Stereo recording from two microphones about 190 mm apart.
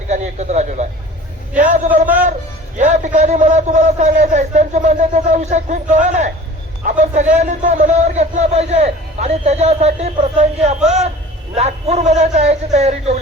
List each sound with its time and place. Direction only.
0.1 s a sound: 35° right (ahead or behind)
1.5 s a man's voice: 45° right (ahead or behind)
10.8 s speech: 5° right (ahead or behind)
11.5 s a man's voice: 35° right (ahead or behind)